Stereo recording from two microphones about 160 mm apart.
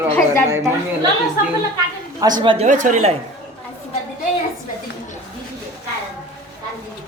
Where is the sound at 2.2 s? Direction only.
25° right (ahead or behind).